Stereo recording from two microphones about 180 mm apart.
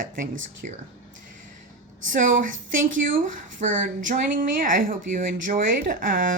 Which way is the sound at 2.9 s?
50° right (ahead or behind).